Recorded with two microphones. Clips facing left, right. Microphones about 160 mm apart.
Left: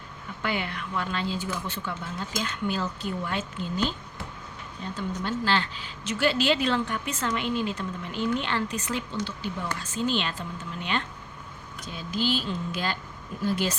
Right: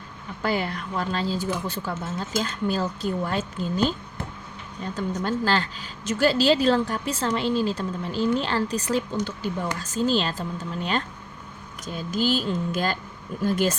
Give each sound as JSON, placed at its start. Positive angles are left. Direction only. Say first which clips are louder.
{"t": 0.4, "sound": "a woman's voice", "louder": "right 4 dB", "side_deg": -35}
{"t": 4.9, "sound": "a woman's voice", "louder": "right 4 dB", "side_deg": -40}